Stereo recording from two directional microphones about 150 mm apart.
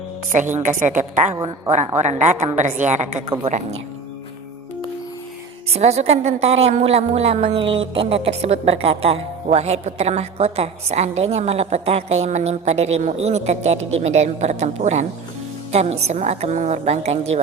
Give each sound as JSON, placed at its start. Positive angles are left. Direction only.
{"t": 0.3, "sound": "a woman's voice", "side_deg": -55}
{"t": 5.7, "sound": "a woman's voice", "side_deg": -45}